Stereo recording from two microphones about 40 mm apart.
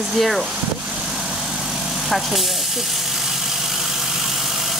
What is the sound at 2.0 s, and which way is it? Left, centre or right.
Speech, centre.